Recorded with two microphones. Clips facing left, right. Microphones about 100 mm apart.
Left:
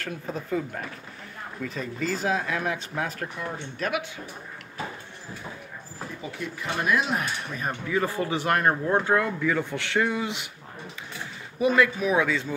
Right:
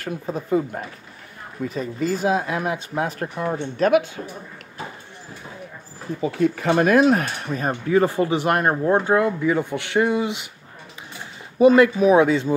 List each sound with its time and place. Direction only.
0.5 s speech: 25° right (ahead or behind)
2.0 s speech: 15° right (ahead or behind)
3.2 s speech: 35° right (ahead or behind)
6.2 s speech: 50° right (ahead or behind); by 8.3 s 30° right (ahead or behind)
8.3 s speech: 20° right (ahead or behind)
11.5 s speech: 30° right (ahead or behind)